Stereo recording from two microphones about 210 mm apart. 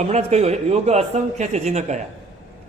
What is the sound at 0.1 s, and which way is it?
Speech, 30° right (ahead or behind).